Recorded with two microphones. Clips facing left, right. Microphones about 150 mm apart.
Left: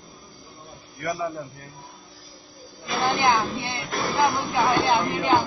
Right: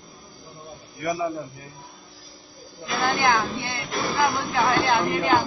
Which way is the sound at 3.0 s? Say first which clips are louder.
Even; 25° left (ahead or behind).